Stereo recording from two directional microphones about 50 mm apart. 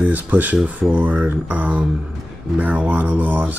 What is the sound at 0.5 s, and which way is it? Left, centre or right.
Speech, right.